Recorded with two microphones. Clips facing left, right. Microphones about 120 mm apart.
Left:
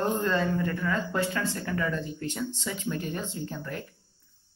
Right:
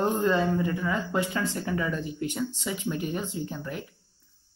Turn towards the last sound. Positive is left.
turn(degrees=-15)  # may be behind; listen again after turning